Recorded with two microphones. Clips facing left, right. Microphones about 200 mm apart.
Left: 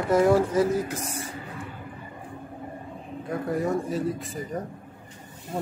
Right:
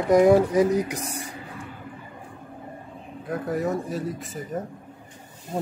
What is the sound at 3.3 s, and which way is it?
Speech, centre (ahead or behind).